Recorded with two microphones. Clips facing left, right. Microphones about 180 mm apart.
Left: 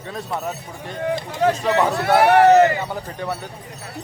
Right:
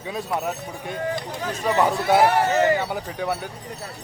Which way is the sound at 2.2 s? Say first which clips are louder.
Left 7 dB; 70° left (ahead or behind).